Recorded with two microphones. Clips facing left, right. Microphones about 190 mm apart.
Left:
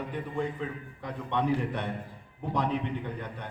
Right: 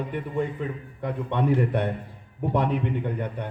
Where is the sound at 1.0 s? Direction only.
60° right (ahead or behind).